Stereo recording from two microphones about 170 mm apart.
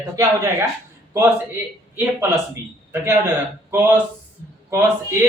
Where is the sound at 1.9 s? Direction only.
15° right (ahead or behind).